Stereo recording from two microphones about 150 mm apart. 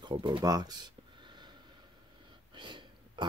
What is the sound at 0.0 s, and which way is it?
Speech, 35° right (ahead or behind).